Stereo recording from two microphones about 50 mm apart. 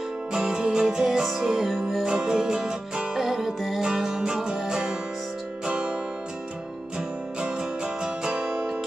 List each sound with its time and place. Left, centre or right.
0.3 s music: centre
2.0 s music: centre
7.3 s music: centre